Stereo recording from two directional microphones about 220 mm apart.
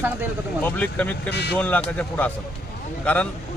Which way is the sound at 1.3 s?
50° left (ahead or behind).